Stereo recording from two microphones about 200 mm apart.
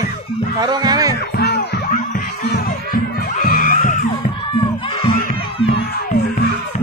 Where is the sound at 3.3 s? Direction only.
45° left (ahead or behind).